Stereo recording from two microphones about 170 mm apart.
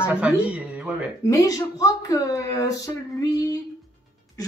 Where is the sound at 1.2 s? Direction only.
20° left (ahead or behind).